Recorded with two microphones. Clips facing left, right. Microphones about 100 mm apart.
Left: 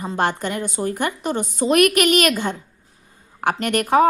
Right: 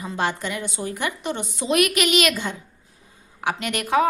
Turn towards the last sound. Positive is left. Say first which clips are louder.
# left 5 dB
turn(degrees=45)  # may be behind; listen again after turning